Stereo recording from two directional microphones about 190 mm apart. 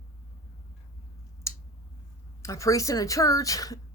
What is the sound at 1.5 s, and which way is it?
Scissors, 15° left (ahead or behind).